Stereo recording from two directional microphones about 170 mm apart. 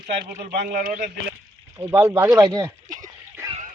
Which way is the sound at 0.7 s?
55° right (ahead or behind).